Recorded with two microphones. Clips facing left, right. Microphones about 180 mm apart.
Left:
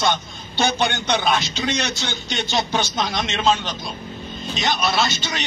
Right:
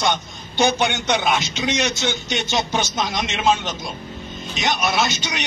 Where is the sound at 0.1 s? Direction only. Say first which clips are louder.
Even; 20° right (ahead or behind).